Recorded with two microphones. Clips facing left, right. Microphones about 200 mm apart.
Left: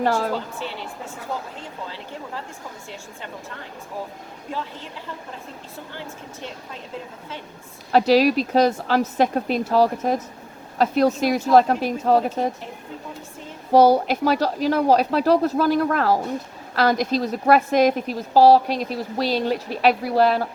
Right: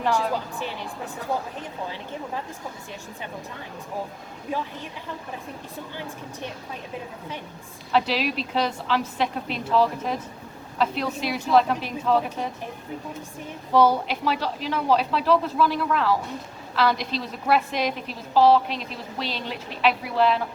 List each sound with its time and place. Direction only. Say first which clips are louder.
0.0 s a woman's voice: left 3 dB; 45° left (ahead or behind)
1.5 s a woman's voice: right 1 dB; 15° right (ahead or behind)
5.9 s a woman's voice: right 1 dB; 15° right (ahead or behind)
7.9 s a woman's voice: left 8 dB; 40° left (ahead or behind)
13.7 s a woman's voice: left 5 dB; 40° left (ahead or behind)